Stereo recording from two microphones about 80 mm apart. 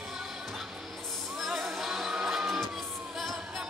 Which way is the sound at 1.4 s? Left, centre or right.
Centre.